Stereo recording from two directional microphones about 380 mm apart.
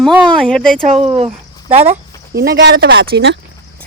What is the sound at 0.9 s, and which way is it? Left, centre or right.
Speech, centre.